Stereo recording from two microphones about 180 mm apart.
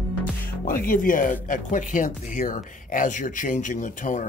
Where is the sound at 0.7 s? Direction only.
50° left (ahead or behind).